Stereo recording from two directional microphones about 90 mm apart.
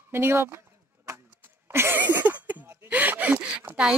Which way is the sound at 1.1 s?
25° right (ahead or behind).